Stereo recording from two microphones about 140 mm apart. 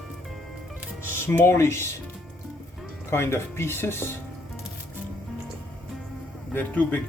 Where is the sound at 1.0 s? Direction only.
15° left (ahead or behind).